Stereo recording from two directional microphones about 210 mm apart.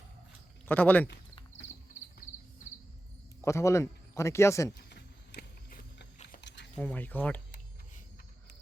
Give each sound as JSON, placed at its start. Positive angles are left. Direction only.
{"t": 0.7, "sound": "speech", "side_deg": 5}
{"t": 3.4, "sound": "speech", "side_deg": 15}
{"t": 4.7, "sound": "a sound", "side_deg": 50}
{"t": 6.7, "sound": "speech", "side_deg": 10}